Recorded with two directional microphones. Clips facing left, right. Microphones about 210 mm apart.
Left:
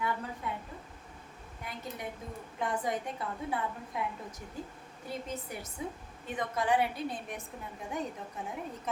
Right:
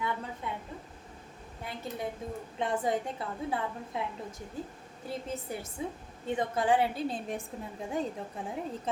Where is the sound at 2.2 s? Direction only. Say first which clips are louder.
Right 3 dB; 25° right (ahead or behind).